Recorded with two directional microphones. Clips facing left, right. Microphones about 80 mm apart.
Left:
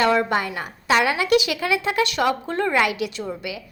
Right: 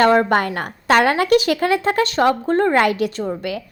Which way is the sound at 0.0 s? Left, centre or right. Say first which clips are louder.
Right 5 dB; right.